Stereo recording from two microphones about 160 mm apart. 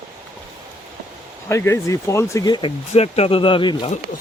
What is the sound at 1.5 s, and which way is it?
Speech, 20° left (ahead or behind).